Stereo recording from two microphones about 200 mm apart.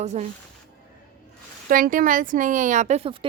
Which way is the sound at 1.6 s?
45° right (ahead or behind).